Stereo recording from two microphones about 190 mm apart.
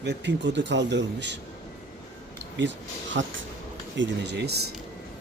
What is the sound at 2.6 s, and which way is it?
Speech, 75° right (ahead or behind).